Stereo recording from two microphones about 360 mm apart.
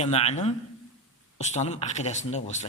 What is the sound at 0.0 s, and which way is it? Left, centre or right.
A man's voice, centre.